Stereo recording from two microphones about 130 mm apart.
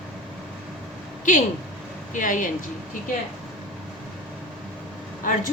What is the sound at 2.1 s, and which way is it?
Speech, 90° left.